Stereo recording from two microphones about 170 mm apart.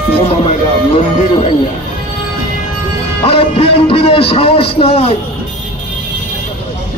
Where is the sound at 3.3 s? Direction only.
35° left (ahead or behind).